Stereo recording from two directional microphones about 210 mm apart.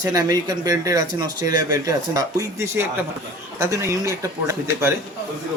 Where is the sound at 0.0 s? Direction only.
15° right (ahead or behind).